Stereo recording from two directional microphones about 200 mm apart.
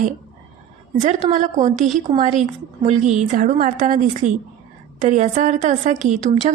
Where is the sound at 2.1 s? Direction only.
25° right (ahead or behind).